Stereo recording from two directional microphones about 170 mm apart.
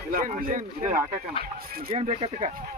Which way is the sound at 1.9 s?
40° right (ahead or behind).